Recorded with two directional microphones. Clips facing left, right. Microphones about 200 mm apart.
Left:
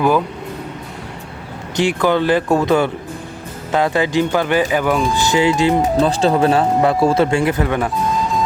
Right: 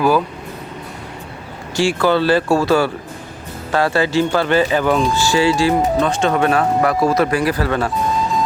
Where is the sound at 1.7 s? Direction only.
20° left (ahead or behind).